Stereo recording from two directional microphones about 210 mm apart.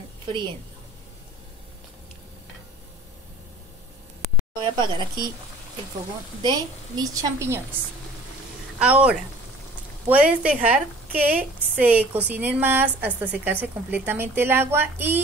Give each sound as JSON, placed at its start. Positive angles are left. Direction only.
{"t": 0.3, "sound": "speech", "side_deg": -25}
{"t": 4.6, "sound": "speech", "side_deg": -20}
{"t": 6.4, "sound": "a woman's voice", "side_deg": -20}
{"t": 8.7, "sound": "a woman's voice", "side_deg": -5}